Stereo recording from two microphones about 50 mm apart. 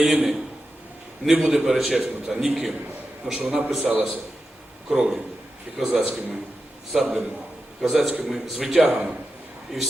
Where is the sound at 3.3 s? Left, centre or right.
Right.